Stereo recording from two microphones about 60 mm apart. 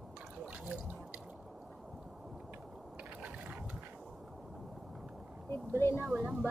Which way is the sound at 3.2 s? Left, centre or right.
Right.